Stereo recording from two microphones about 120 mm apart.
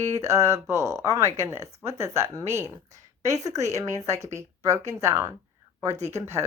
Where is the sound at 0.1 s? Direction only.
25° right (ahead or behind).